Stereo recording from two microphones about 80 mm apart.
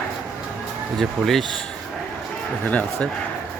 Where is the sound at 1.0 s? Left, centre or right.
Centre.